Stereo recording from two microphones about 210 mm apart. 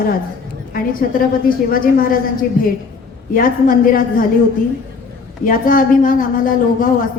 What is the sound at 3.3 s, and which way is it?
Speech, 40° left (ahead or behind).